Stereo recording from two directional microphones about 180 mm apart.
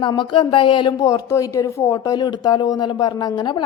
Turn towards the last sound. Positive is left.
turn(degrees=25)  # may be behind; listen again after turning